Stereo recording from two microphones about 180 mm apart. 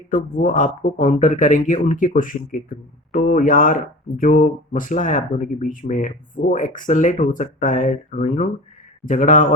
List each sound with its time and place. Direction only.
0.1 s speech: 45° left (ahead or behind)